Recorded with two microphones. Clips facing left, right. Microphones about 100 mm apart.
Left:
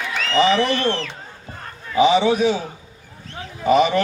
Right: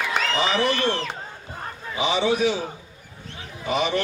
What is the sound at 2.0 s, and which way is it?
Speech, 40° left (ahead or behind).